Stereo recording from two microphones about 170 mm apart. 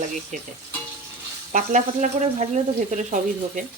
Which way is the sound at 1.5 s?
45° right (ahead or behind).